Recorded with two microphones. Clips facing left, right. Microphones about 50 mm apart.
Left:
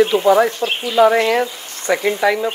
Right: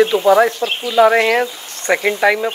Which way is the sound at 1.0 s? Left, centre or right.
Right.